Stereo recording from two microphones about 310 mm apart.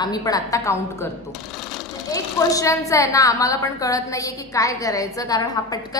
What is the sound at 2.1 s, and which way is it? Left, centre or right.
A woman's voice, centre.